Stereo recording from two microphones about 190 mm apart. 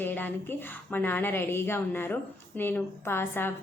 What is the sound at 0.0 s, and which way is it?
A woman's voice, 10° left (ahead or behind).